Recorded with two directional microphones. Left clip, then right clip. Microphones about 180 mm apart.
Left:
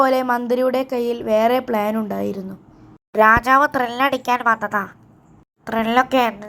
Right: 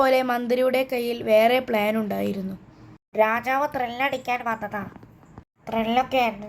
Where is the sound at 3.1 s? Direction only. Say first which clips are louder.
Left 8 dB; 20° left (ahead or behind).